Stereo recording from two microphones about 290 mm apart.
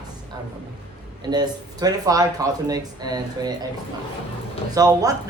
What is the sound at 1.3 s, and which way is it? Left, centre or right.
Speech, centre.